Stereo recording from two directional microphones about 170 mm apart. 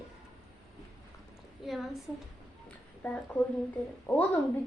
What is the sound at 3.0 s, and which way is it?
A woman's voice, 10° left (ahead or behind).